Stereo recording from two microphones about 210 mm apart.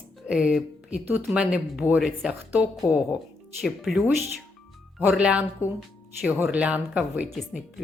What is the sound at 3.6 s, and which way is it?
Speech, centre (ahead or behind).